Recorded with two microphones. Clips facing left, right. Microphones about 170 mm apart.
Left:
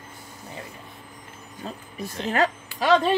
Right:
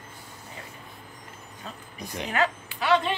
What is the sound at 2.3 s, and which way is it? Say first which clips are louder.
Speech: left 4 dB; 40° left (ahead or behind).